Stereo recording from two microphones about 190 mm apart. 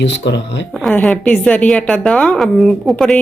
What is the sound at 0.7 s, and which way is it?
A woman's voice, 5° left (ahead or behind).